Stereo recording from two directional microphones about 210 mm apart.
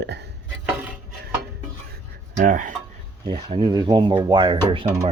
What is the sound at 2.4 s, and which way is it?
Speech, 40° right (ahead or behind).